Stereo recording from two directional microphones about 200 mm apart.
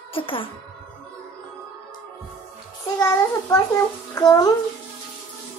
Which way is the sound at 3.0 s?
15° left (ahead or behind).